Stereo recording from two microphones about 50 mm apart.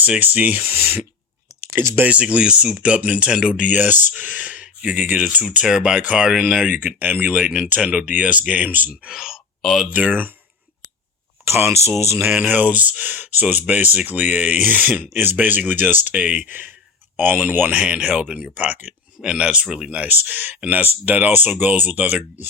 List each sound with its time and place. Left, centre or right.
0.0 s speech: right
2.0 s speech: right
3.7 s speech: right
4.2 s a sound: right
5.6 s speech: centre
6.7 s speech: right
7.3 s speech: right
9.0 s a sound: centre
9.9 s speech: right
11.4 s speech: right
12.4 s speech: right
17.7 s speech: right
19.2 s speech: centre
20.1 s speech: right